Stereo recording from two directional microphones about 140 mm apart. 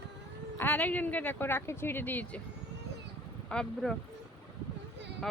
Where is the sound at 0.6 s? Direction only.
15° left (ahead or behind).